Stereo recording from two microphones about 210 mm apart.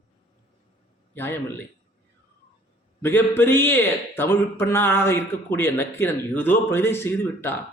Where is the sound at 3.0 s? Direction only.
10° left (ahead or behind).